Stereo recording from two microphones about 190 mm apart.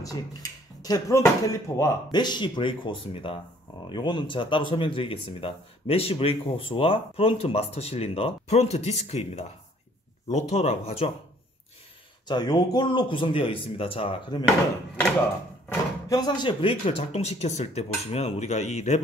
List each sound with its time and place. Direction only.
0.0 s speech: 20° left (ahead or behind); by 11.1 s 35° left (ahead or behind)
12.3 s speech: 20° left (ahead or behind)
15.7 s speech: 20° left (ahead or behind); by 19.0 s 35° left (ahead or behind)